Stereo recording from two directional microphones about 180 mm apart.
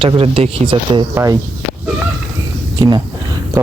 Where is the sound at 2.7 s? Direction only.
25° right (ahead or behind).